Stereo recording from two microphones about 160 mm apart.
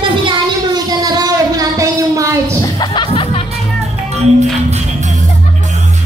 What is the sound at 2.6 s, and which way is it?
Chuckle, 25° left (ahead or behind).